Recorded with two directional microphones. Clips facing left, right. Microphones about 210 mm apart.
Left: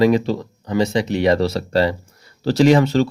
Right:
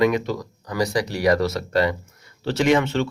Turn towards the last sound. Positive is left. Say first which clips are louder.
# left 5 dB
turn(degrees=35)  # may be behind; listen again after turning